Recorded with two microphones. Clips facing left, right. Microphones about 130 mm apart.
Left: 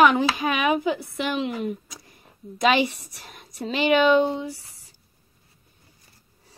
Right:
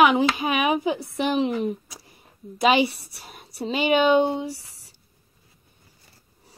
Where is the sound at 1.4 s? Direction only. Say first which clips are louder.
Right 3 dB; 35° right (ahead or behind).